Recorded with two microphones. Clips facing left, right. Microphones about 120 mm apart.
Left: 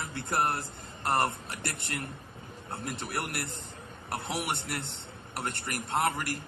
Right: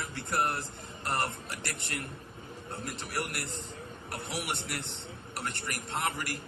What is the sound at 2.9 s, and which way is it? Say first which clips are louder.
A man's voice: left 1 dB; 50° left (ahead or behind).